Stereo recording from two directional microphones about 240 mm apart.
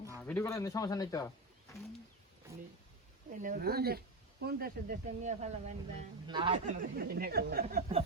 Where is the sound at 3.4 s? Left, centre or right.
Right.